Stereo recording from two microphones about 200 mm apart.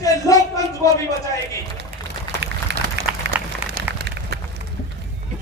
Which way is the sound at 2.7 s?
55° right (ahead or behind).